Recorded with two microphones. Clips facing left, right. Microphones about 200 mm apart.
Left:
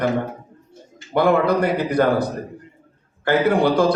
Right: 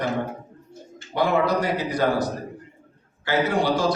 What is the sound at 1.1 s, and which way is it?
A man's voice, 55° left (ahead or behind).